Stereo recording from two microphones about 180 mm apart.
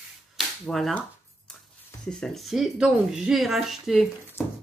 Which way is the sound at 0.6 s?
Centre (ahead or behind).